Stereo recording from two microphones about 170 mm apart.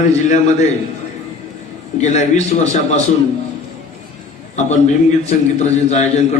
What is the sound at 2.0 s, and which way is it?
A man's voice, 45° left (ahead or behind).